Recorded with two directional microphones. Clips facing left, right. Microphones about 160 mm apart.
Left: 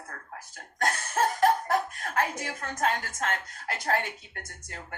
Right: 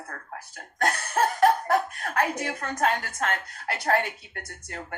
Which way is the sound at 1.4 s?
60° right (ahead or behind).